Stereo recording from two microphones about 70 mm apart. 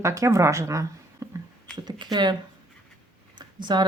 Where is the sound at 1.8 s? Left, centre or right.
Right.